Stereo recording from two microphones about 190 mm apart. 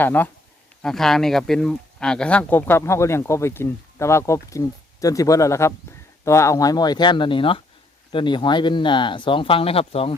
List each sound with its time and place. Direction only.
0.0 s speech: 10° left (ahead or behind); by 10.2 s 30° left (ahead or behind)